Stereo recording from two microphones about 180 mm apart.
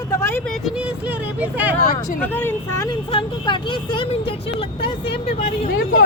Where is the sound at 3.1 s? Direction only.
30° left (ahead or behind).